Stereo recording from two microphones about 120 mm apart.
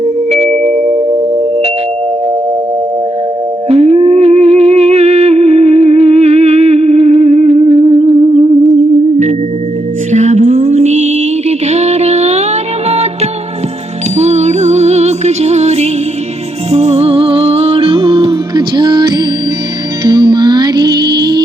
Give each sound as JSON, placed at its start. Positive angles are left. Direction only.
{"t": 0.3, "sound": "music", "side_deg": -65}
{"t": 3.7, "sound": "music", "side_deg": -60}
{"t": 10.1, "sound": "music", "side_deg": -75}
{"t": 14.2, "sound": "music", "side_deg": -65}